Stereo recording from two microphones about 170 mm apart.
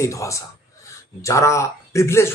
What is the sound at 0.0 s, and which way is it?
Speech, 15° left (ahead or behind).